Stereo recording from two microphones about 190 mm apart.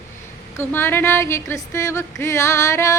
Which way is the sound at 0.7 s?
10° left (ahead or behind).